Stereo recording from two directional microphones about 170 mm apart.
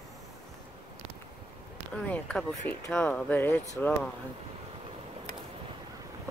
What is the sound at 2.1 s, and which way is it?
Speech, 5° left (ahead or behind).